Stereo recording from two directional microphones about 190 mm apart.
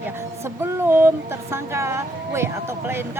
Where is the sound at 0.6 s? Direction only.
10° right (ahead or behind).